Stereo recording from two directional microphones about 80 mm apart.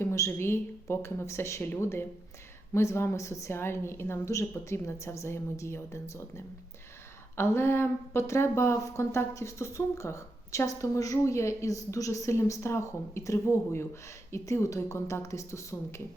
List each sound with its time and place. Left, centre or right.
0.0 s a woman's voice: left